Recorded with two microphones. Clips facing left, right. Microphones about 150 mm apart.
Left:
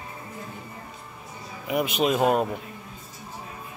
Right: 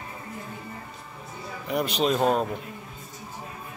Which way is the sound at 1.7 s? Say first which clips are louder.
Left 1 dB; 5° left (ahead or behind).